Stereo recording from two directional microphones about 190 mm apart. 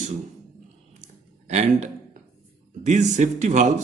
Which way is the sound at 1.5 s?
35° right (ahead or behind).